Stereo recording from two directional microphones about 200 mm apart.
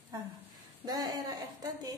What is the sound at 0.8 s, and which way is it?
Speech, 20° right (ahead or behind).